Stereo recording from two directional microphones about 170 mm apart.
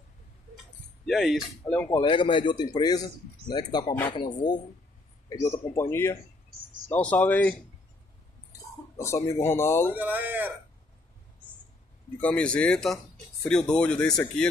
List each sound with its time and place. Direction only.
1.0 s speech: centre (ahead or behind)
2.0 s speech: 30° left (ahead or behind); by 7.5 s 10° left (ahead or behind)
8.9 s speech: 15° left (ahead or behind)
9.9 s speech: 10° right (ahead or behind)
12.2 s speech: 5° left (ahead or behind)